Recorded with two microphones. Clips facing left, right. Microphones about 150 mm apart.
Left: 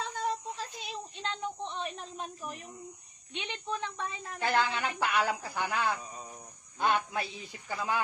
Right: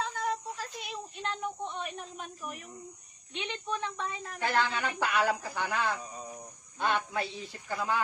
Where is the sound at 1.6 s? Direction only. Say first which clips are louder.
Even; 30° left (ahead or behind).